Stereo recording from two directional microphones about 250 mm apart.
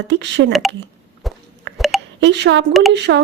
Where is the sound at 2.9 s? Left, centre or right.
Right.